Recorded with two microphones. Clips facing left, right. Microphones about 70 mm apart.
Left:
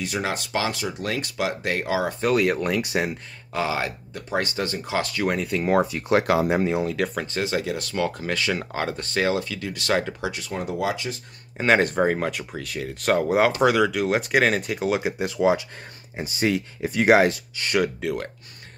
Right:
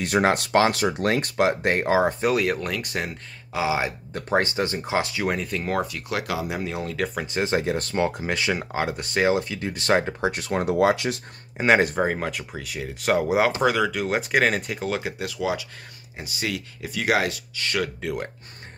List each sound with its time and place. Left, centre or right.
0.0 s speech: right
2.2 s speech: centre
3.5 s speech: centre
4.1 s speech: right
5.1 s speech: centre
5.7 s speech: left
6.8 s speech: centre
7.4 s speech: right
10.3 s speech: right
11.5 s speech: centre
14.9 s speech: centre
15.2 s speech: left